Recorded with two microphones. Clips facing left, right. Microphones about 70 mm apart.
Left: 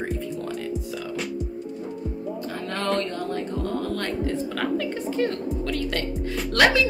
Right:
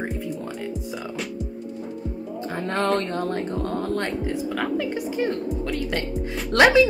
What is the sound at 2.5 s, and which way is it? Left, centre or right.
Speech, right.